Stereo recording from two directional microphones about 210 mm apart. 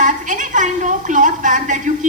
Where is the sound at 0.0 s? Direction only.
35° right (ahead or behind).